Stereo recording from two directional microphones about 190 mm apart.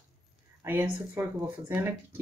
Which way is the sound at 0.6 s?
10° right (ahead or behind).